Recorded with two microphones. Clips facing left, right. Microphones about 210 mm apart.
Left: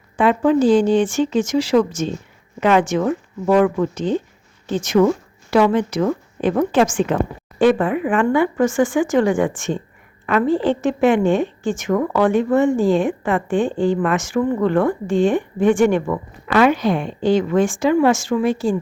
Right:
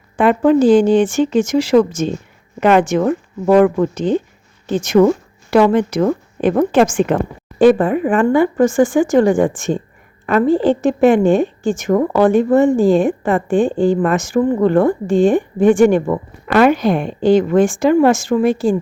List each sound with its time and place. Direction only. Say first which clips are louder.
0.2 s a woman's voice: right 3 dB; 50° right (ahead or behind)
7.6 s a woman's voice: right 4 dB; 40° right (ahead or behind)
16.5 s a woman's voice: right 3 dB; 50° right (ahead or behind)